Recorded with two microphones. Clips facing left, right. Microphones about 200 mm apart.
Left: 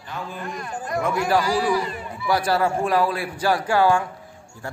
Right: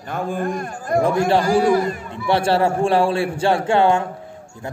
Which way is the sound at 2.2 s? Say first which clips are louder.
Right 4 dB; 30° right (ahead or behind).